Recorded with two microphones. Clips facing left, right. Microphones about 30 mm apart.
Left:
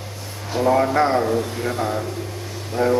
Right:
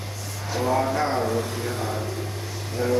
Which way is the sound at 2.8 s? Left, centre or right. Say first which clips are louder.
Left 6 dB; left.